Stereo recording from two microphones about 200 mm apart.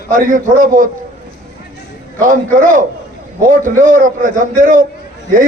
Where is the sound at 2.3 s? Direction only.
40° right (ahead or behind).